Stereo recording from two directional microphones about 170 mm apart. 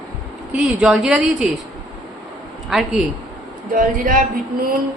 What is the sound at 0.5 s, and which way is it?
Speech, 5° right (ahead or behind).